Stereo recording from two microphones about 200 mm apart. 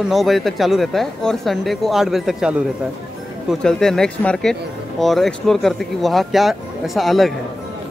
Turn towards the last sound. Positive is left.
turn(degrees=0)  # may be behind; listen again after turning